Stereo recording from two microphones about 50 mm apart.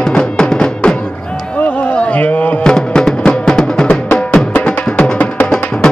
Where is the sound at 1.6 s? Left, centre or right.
Left.